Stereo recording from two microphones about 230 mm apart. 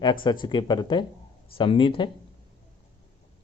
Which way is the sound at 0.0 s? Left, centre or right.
Centre.